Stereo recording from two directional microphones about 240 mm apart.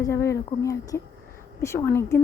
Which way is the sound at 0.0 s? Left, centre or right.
Centre.